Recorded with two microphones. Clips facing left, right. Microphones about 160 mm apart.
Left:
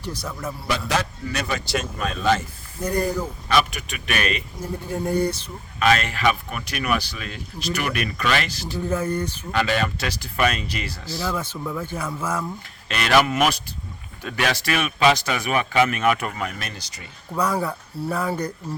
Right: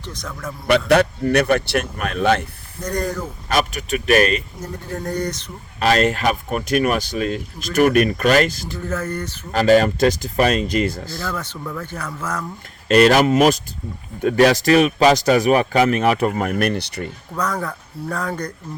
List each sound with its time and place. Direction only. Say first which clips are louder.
0.0 s speech: left 1 dB; 10° left (ahead or behind)
0.7 s speech: right 10 dB; 65° right (ahead or behind)
2.8 s speech: left 1 dB; 10° left (ahead or behind)
3.5 s speech: right 2 dB; 45° right (ahead or behind)
4.6 s speech: left 1 dB; 10° left (ahead or behind)
5.8 s speech: right 3 dB; 35° right (ahead or behind)
8.7 s speech: left 1 dB; 10° left (ahead or behind)
9.5 s speech: right 10 dB; 40° right (ahead or behind)
11.2 s speech: left 3 dB; 10° left (ahead or behind)
12.9 s speech: right 7 dB; 40° right (ahead or behind)
16.3 s speech: right 11 dB; 55° right (ahead or behind)
17.3 s speech: left 1 dB; 10° left (ahead or behind)